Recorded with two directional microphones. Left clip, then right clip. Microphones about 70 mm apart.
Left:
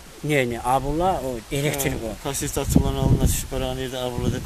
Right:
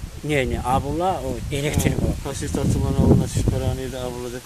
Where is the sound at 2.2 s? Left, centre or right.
Left.